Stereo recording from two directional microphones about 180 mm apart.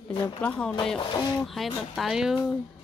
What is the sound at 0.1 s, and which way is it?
Speech, 25° left (ahead or behind).